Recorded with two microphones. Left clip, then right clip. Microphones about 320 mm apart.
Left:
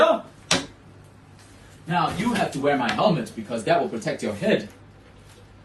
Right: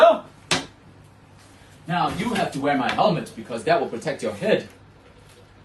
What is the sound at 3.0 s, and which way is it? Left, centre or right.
Speech, centre.